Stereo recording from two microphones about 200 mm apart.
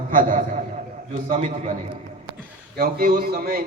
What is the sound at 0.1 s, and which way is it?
A man's voice, 40° right (ahead or behind).